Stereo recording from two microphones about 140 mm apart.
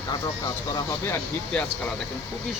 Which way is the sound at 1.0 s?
20° left (ahead or behind).